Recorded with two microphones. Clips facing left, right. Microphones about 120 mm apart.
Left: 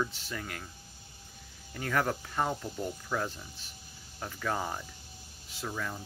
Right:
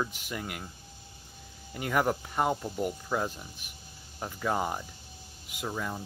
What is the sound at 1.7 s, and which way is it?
Speech, 15° right (ahead or behind).